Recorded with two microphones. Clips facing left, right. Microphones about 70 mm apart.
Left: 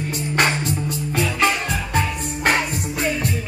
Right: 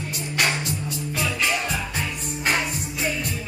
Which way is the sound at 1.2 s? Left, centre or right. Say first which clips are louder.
Left 5 dB; left.